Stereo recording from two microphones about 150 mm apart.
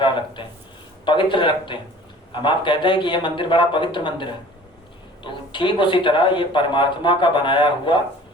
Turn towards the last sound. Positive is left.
turn(degrees=30)  # may be behind; listen again after turning